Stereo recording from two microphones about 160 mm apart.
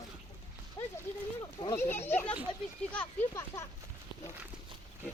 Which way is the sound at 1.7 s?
15° left (ahead or behind).